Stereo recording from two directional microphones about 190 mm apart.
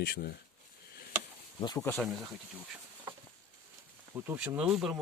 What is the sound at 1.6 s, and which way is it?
Speech, 25° left (ahead or behind).